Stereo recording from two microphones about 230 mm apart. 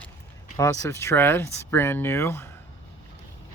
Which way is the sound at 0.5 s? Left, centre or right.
Centre.